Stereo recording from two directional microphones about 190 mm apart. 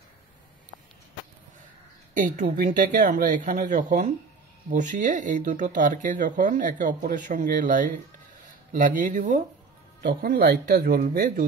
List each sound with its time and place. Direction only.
2.1 s speech: 40° right (ahead or behind)